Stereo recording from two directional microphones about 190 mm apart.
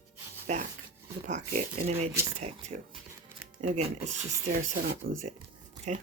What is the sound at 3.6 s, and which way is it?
Speech, 35° right (ahead or behind).